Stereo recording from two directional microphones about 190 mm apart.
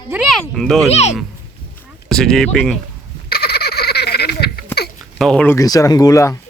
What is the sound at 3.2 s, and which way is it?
Baby laughter, 55° left (ahead or behind).